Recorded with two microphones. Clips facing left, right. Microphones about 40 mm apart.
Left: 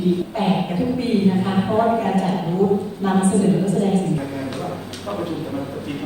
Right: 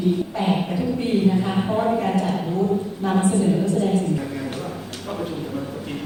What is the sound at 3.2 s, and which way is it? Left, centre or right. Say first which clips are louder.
Speech: left 2 dB; left.